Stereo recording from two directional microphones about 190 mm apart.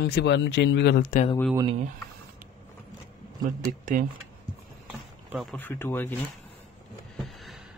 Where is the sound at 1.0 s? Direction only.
45° left (ahead or behind).